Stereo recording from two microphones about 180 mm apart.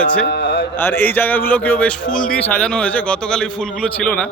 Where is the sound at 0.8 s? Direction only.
10° left (ahead or behind).